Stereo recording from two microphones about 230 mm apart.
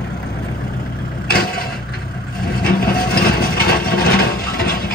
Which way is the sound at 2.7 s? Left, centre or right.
Left.